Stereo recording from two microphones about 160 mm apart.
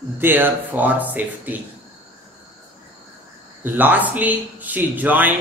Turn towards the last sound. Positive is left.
turn(degrees=-10)  # may be behind; listen again after turning